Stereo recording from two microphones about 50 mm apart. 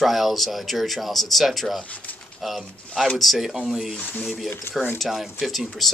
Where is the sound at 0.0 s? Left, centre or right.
Centre.